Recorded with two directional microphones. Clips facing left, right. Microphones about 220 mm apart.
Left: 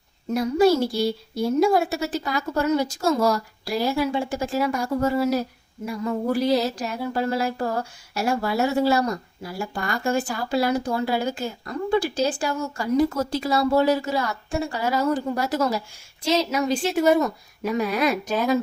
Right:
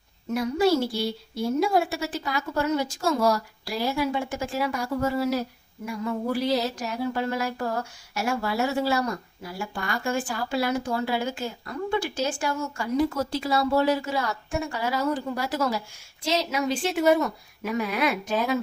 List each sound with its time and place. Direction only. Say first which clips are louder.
0.3 s speech: left 4 dB; 40° left (ahead or behind)